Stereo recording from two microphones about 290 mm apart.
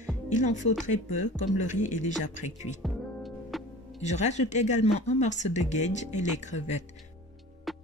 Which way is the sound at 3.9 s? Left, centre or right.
Left.